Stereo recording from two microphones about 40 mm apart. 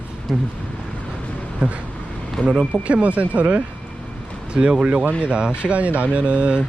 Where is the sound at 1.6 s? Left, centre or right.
Right.